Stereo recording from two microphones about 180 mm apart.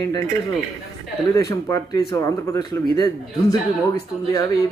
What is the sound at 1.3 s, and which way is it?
Speech, 15° left (ahead or behind).